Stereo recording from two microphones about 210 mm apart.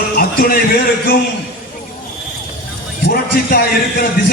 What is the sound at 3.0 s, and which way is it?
A man's voice, 50° left (ahead or behind).